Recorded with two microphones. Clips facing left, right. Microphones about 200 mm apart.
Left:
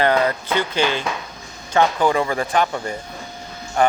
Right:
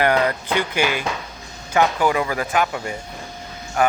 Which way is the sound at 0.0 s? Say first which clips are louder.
Left 1 dB; 15° right (ahead or behind).